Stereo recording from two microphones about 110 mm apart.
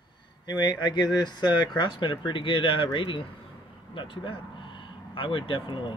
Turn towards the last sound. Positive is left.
turn(degrees=50)  # may be behind; listen again after turning